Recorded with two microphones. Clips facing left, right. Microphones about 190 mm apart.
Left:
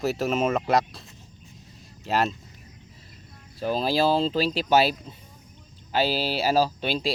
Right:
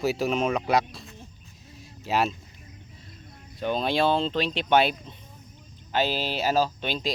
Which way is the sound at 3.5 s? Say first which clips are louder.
Left 1 dB; 5° left (ahead or behind).